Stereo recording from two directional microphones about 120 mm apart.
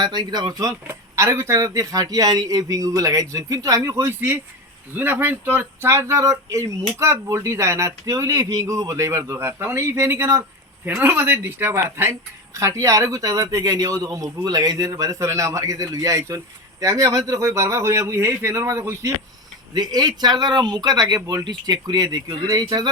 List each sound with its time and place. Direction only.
0.0 s a woman's voice: 35° right (ahead or behind)
19.7 s speech: 35° right (ahead or behind)